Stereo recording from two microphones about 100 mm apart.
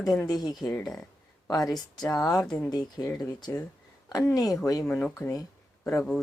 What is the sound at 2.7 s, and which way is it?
Speech, 40° left (ahead or behind).